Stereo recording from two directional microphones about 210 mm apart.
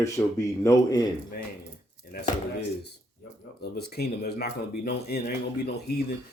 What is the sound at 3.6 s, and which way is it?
Speech, 50° left (ahead or behind).